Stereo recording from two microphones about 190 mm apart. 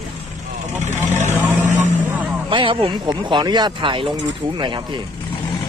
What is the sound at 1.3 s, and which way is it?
Speech, 10° right (ahead or behind).